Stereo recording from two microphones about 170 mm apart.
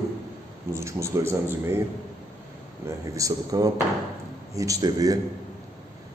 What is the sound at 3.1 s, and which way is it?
Speech, 20° right (ahead or behind).